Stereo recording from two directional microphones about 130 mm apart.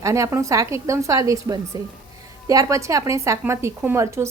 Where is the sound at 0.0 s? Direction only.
20° right (ahead or behind).